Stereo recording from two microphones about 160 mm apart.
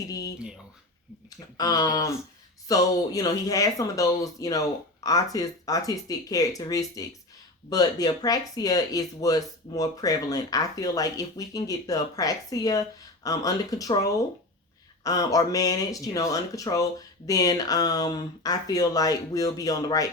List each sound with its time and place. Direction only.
0.0 s speech: 20° left (ahead or behind)
0.3 s speech: 5° right (ahead or behind)
1.5 s speech: 25° left (ahead or behind)